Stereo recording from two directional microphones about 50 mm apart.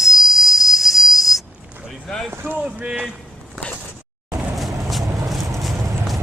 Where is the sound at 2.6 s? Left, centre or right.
Right.